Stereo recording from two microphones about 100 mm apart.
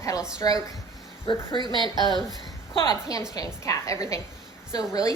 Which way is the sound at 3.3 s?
35° left (ahead or behind).